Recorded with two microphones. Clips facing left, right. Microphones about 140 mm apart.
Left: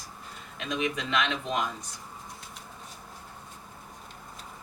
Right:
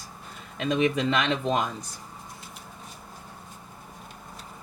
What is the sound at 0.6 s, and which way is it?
Speech, 35° right (ahead or behind).